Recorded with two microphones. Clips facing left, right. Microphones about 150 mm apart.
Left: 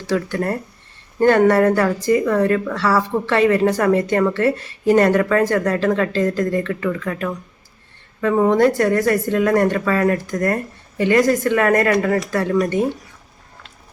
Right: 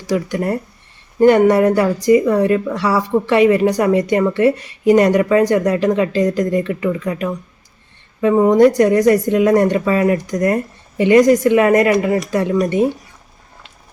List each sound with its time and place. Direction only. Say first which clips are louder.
0.1 s speech: right 2 dB; 15° right (ahead or behind)